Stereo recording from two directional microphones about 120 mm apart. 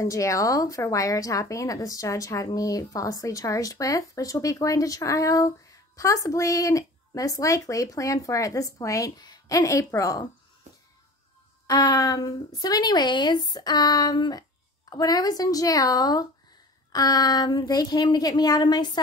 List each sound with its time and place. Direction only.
0.0 s a woman's voice: 25° left (ahead or behind)
11.6 s a woman's voice: 35° left (ahead or behind)